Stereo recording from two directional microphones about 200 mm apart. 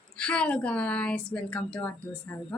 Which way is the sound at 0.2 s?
5° left (ahead or behind).